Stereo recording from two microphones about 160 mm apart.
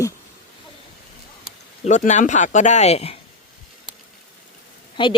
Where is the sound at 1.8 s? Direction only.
50° left (ahead or behind).